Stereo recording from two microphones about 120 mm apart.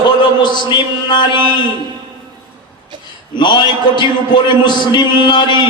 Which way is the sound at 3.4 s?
40° left (ahead or behind).